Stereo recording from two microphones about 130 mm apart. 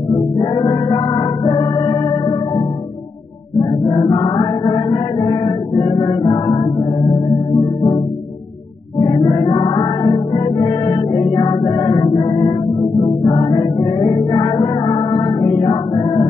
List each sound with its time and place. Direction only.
0.1 s music: 35° left (ahead or behind)
3.5 s chant: 35° left (ahead or behind)
9.0 s music: 35° left (ahead or behind)